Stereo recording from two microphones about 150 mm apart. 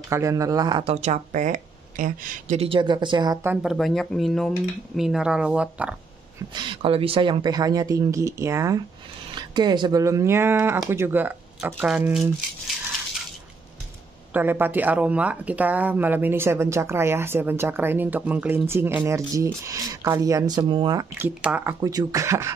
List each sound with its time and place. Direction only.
0.1 s speech: 20° right (ahead or behind)
0.8 s speech: 50° right (ahead or behind); by 3.3 s 30° right (ahead or behind)
3.6 s speech: centre (ahead or behind)
6.5 s speech: 35° right (ahead or behind); by 12.7 s 5° right (ahead or behind)
14.3 s speech: 15° right (ahead or behind); by 21.1 s 30° right (ahead or behind)
21.2 s speech: 10° right (ahead or behind)
21.8 s speech: 20° right (ahead or behind)